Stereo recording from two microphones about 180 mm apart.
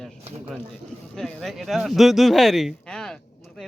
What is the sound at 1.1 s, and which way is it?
Speech, centre (ahead or behind).